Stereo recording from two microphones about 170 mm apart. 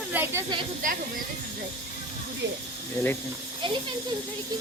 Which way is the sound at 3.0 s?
20° left (ahead or behind).